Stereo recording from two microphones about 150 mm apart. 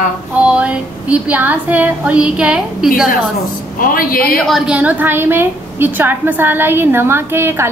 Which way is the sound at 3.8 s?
75° left (ahead or behind).